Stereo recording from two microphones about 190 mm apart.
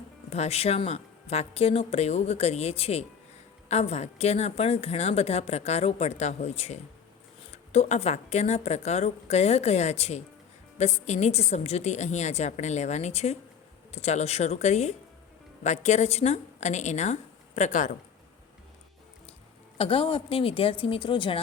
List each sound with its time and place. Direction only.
0.3 s a woman's voice: 35° left (ahead or behind)
19.8 s a woman's voice: 30° left (ahead or behind)